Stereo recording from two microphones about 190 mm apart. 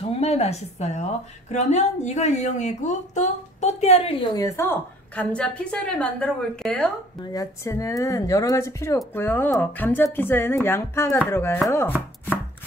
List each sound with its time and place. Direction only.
0.0 s a woman's voice: 30° left (ahead or behind)
4.4 s speech: 15° left (ahead or behind)
7.2 s speech: 20° left (ahead or behind)